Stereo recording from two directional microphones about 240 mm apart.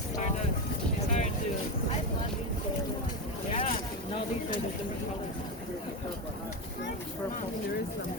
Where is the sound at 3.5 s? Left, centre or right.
Left.